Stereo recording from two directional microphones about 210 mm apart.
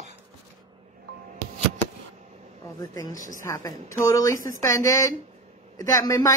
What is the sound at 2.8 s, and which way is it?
A woman's voice, 15° left (ahead or behind).